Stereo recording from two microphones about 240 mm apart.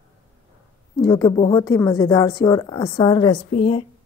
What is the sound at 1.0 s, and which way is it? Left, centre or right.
A woman's voice, centre.